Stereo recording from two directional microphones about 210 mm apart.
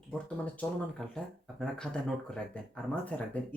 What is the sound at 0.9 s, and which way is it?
Speech, 5° left (ahead or behind).